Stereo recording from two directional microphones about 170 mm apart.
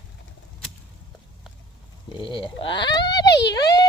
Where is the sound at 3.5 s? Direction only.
20° left (ahead or behind).